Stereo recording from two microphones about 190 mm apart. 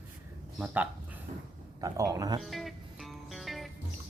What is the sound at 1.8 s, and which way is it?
Speech, 20° right (ahead or behind).